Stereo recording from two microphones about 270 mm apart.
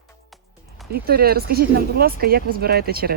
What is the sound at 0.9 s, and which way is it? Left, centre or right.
Speech, right.